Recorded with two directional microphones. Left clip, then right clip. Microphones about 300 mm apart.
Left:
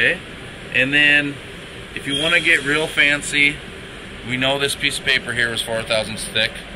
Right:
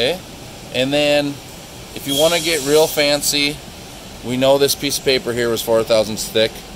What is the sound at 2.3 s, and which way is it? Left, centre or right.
Speech, right.